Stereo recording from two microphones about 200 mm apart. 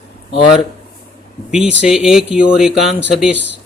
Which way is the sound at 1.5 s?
5° right (ahead or behind).